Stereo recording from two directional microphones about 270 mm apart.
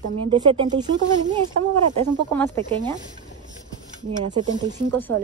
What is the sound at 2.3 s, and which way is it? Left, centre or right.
Speech, centre.